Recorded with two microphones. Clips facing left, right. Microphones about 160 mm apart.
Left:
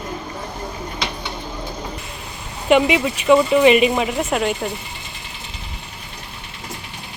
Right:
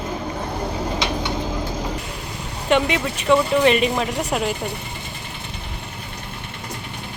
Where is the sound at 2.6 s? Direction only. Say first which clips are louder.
Left 4 dB; 5° left (ahead or behind).